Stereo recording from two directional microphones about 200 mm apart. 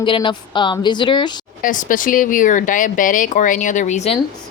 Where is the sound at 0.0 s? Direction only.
25° left (ahead or behind).